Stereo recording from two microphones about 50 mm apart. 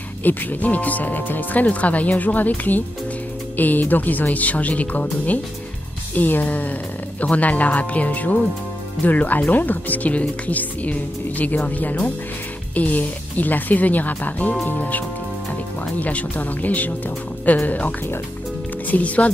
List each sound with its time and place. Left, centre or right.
0.2 s speech: left
6.1 s speech: left